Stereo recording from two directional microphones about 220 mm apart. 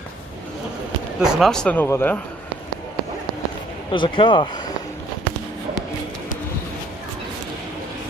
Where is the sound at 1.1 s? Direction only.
5° right (ahead or behind).